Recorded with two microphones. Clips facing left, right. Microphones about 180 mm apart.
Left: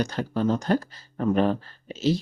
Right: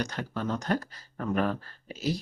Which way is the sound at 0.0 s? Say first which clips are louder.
Left 7 dB; 30° left (ahead or behind).